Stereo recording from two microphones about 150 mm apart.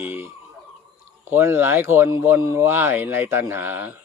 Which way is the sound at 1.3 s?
15° right (ahead or behind).